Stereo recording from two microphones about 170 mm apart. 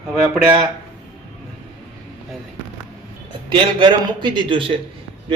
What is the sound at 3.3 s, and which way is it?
A man's voice, 30° right (ahead or behind).